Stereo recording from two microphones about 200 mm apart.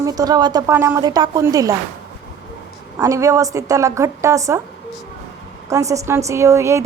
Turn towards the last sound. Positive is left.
turn(degrees=-15)  # may be behind; listen again after turning